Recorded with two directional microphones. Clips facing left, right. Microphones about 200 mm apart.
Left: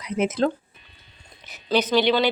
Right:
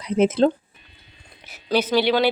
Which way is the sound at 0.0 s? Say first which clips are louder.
Right 5 dB; 30° right (ahead or behind).